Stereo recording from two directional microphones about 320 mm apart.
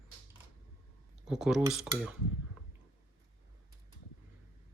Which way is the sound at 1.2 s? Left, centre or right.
Centre.